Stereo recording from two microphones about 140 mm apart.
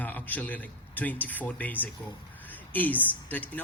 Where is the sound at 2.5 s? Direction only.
10° left (ahead or behind).